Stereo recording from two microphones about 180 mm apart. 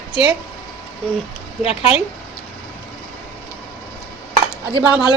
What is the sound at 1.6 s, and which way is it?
Speech, 35° left (ahead or behind).